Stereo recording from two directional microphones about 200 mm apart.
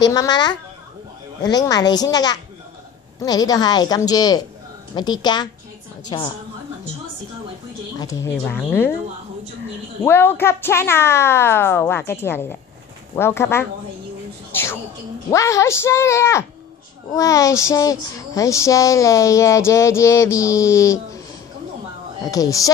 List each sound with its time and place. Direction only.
0.0 s a woman's voice: 20° left (ahead or behind)
8.0 s speech: 15° left (ahead or behind)
10.0 s speech: 10° left (ahead or behind)
14.5 s a sound: 10° left (ahead or behind)
15.3 s speech: 15° left (ahead or behind)
22.3 s speech: 15° left (ahead or behind)